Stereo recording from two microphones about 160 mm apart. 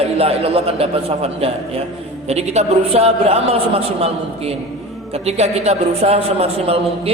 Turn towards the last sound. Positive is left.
turn(degrees=-40)  # may be behind; listen again after turning